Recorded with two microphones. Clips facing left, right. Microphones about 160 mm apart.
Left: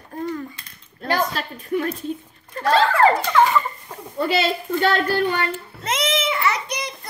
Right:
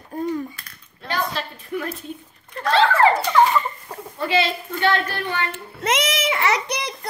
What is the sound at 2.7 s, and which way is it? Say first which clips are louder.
Speech: even; 40° left (ahead or behind).